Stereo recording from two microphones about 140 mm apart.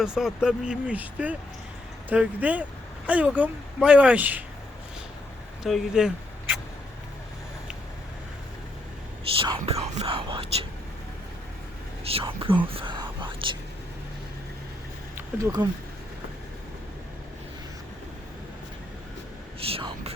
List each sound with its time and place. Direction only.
0.0 s speech: 5° right (ahead or behind)
5.6 s speech: centre (ahead or behind)
9.4 s speech: 40° right (ahead or behind)
12.0 s speech: 40° right (ahead or behind)
15.6 s speech: 30° right (ahead or behind)
19.5 s whispering: 45° right (ahead or behind)